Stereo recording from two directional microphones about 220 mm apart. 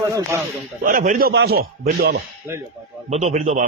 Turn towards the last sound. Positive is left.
turn(degrees=-35)  # may be behind; listen again after turning